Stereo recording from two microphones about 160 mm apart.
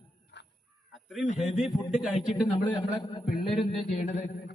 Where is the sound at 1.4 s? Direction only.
Centre (ahead or behind).